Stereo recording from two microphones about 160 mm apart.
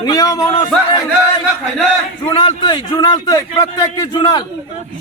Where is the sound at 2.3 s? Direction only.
30° left (ahead or behind).